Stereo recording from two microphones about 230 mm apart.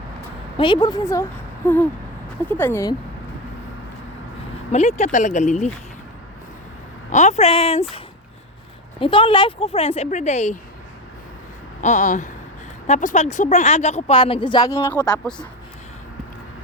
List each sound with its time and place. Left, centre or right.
0.5 s speech: centre
4.7 s speech: left
7.1 s speech: left
9.0 s speech: left
11.8 s speech: left; by 15.4 s centre